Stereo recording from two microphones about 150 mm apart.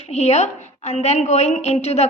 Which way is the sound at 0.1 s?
45° left (ahead or behind).